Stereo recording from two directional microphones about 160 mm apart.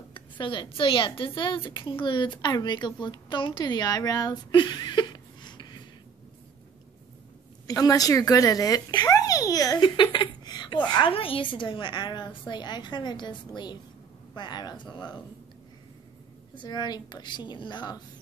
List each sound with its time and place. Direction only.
0.1 s a woman's voice: 30° left (ahead or behind)
7.6 s a woman's voice: 20° left (ahead or behind)
16.5 s a woman's voice: 25° left (ahead or behind)